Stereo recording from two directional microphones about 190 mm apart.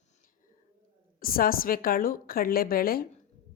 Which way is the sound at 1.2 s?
50° left (ahead or behind).